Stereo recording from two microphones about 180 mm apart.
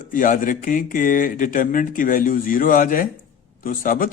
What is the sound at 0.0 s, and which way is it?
Speech, 50° left (ahead or behind).